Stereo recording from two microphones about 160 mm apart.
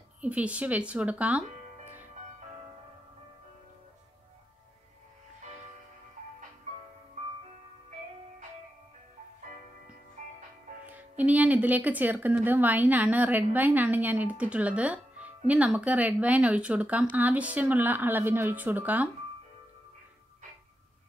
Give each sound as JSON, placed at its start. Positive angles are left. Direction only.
{"t": 0.2, "sound": "speech", "side_deg": -10}
{"t": 10.2, "sound": "music", "side_deg": -50}
{"t": 10.9, "sound": "speech", "side_deg": -10}